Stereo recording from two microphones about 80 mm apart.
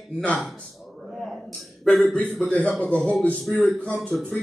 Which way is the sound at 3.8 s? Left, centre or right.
Centre.